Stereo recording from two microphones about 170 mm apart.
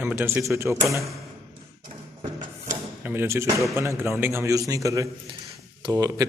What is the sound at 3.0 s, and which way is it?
A man's voice, 10° right (ahead or behind).